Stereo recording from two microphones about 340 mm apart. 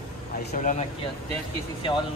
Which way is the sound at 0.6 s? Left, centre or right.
Left.